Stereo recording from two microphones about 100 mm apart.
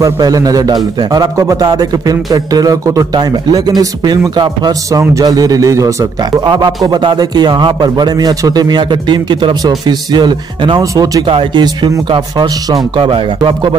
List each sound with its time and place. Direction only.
0.0 s a man's voice: 40° right (ahead or behind)
10.8 s a man's voice: 35° right (ahead or behind)
11.2 s speech: 60° right (ahead or behind)
12.1 s a man's voice: 45° right (ahead or behind)